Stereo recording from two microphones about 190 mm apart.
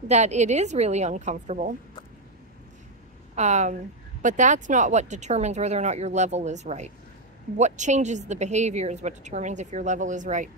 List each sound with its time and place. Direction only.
0.1 s a woman's voice: 35° right (ahead or behind)
3.3 s a woman's voice: 35° right (ahead or behind)